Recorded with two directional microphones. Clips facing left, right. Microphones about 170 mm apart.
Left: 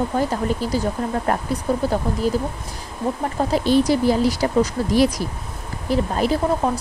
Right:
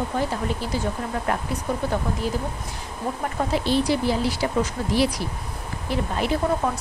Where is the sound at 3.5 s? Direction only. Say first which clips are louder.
Left 5 dB; 45° left (ahead or behind).